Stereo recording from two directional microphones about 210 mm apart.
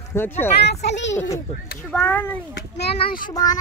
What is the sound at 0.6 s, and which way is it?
Speech, 55° left (ahead or behind).